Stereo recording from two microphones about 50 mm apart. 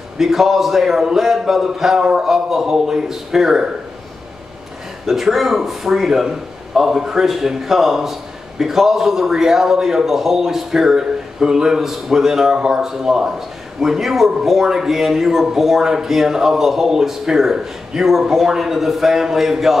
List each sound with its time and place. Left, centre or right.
0.2 s a man's voice: centre
5.0 s a man's voice: centre